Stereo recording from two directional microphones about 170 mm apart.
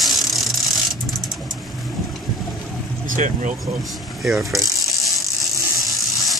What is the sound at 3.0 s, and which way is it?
Speech, 50° right (ahead or behind).